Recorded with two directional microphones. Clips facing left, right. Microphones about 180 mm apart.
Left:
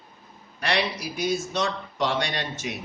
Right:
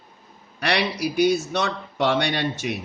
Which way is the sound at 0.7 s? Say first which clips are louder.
Right 3 dB; 65° right (ahead or behind).